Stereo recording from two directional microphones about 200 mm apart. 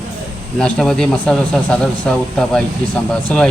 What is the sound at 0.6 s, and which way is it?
Speech, 5° left (ahead or behind).